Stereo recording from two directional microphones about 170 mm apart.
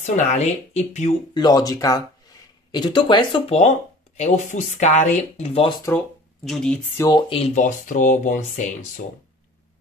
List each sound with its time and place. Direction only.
0.0 s speech: 45° left (ahead or behind)
1.3 s speech: 25° left (ahead or behind)
6.4 s speech: centre (ahead or behind)
7.0 s speech: 25° left (ahead or behind); by 9.0 s 50° left (ahead or behind)